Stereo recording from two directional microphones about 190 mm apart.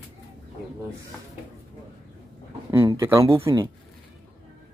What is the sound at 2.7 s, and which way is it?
Speech, 15° right (ahead or behind).